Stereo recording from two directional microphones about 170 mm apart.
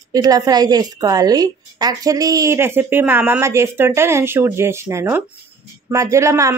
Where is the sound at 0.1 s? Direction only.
20° right (ahead or behind).